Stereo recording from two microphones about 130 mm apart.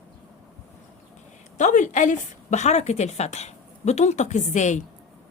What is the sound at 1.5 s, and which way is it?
A woman's voice, 70° left (ahead or behind).